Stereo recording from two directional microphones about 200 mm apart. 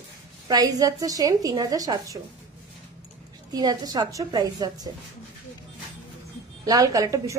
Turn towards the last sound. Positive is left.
turn(degrees=-15)  # may be behind; listen again after turning